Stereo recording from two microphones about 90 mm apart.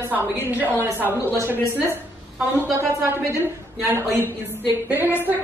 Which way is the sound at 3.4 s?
25° right (ahead or behind).